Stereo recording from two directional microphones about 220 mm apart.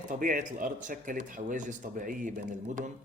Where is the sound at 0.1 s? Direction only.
40° right (ahead or behind).